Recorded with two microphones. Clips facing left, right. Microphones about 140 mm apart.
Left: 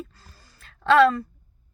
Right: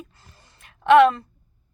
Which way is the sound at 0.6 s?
20° right (ahead or behind).